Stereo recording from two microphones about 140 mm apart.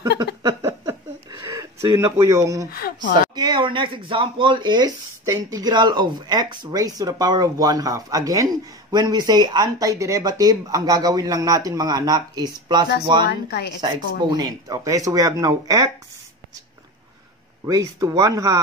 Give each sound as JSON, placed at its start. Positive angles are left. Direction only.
{"t": 0.0, "sound": "a sound", "side_deg": -30}
{"t": 2.7, "sound": "speech", "side_deg": 90}
{"t": 3.3, "sound": "speech", "side_deg": -30}
{"t": 14.3, "sound": "speech", "side_deg": -25}
{"t": 17.6, "sound": "speech", "side_deg": -25}